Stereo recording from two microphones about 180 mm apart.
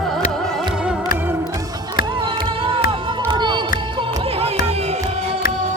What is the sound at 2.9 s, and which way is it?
Crowd, 25° right (ahead or behind).